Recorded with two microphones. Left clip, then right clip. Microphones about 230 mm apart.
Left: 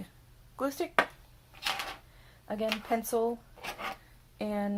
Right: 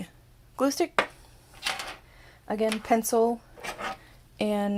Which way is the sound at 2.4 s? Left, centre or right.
Right.